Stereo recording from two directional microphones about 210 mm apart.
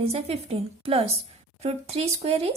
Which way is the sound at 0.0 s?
30° right (ahead or behind).